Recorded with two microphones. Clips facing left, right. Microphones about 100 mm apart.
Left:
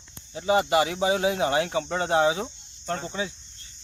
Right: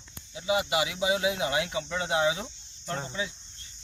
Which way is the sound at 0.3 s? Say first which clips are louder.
Left 6 dB; 45° left (ahead or behind).